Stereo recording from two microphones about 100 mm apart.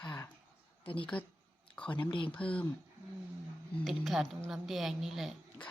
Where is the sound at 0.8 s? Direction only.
60° left (ahead or behind).